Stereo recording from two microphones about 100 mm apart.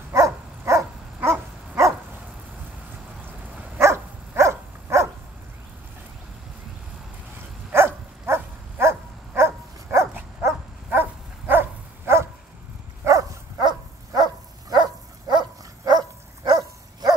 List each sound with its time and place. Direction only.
0.1 s dog: 30° right (ahead or behind)
3.7 s dog: 25° right (ahead or behind)
7.7 s dog: 25° right (ahead or behind)
13.0 s dog: 35° right (ahead or behind)